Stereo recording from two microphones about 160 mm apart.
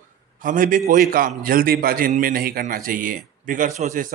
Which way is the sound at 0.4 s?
60° right (ahead or behind).